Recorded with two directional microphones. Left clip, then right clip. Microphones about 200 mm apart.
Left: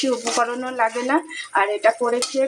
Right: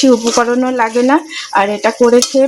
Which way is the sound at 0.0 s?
45° right (ahead or behind).